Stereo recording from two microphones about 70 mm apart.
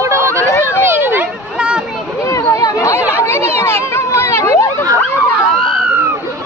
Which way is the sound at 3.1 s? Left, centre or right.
Left.